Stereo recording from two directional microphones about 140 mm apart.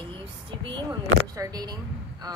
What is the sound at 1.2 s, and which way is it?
Speech, 25° right (ahead or behind).